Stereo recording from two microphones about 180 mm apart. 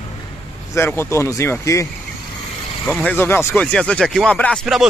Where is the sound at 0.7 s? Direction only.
15° left (ahead or behind).